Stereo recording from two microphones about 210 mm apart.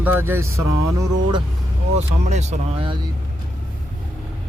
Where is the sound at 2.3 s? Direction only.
30° right (ahead or behind).